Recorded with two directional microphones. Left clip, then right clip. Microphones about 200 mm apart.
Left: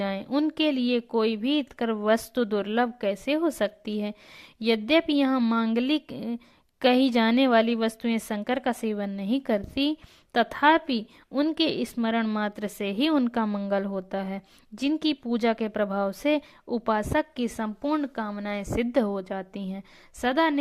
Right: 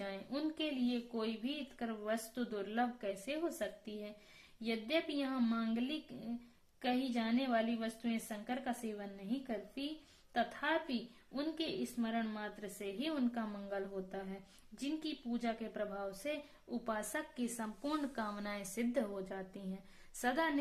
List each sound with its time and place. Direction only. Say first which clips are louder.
0.0 s a woman's voice: left 14 dB; 40° left (ahead or behind)